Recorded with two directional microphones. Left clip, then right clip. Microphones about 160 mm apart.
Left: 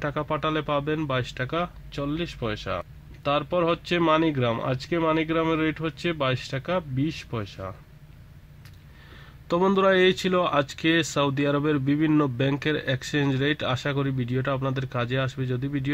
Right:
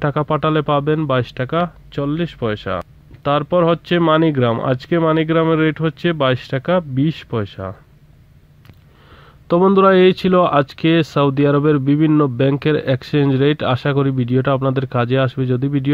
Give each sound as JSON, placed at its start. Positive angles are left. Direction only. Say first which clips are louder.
{"t": 0.0, "sound": "speech", "louder": "right 9 dB", "side_deg": -35}
{"t": 9.5, "sound": "speech", "louder": "right 9 dB", "side_deg": -30}